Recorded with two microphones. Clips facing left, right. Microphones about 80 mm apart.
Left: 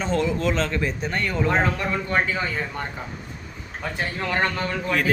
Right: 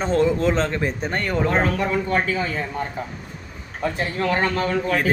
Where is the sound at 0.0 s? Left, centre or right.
Right.